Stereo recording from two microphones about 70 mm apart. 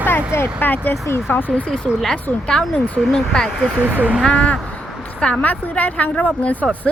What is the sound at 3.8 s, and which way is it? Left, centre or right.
Speech, right.